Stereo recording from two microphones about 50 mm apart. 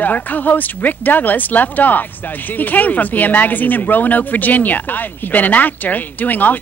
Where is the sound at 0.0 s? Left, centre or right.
Left.